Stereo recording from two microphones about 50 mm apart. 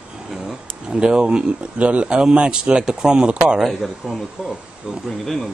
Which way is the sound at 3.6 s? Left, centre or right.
Centre.